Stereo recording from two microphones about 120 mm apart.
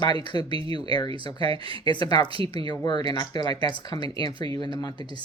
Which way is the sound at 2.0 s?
35° left (ahead or behind).